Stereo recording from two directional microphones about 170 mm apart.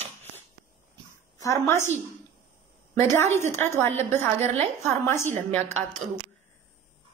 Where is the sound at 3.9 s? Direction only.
40° right (ahead or behind).